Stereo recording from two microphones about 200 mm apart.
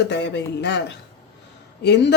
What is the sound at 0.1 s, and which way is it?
Speech, 60° left (ahead or behind).